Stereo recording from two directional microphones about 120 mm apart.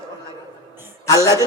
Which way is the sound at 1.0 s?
25° left (ahead or behind).